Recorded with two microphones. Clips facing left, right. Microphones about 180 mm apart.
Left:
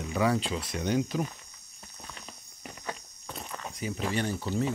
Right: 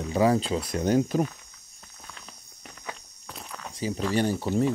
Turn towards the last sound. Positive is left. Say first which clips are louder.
# right 5 dB
turn(degrees=-35)  # may be behind; listen again after turning